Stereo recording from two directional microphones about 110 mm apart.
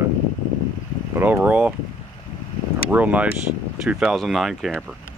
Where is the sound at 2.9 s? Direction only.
15° right (ahead or behind).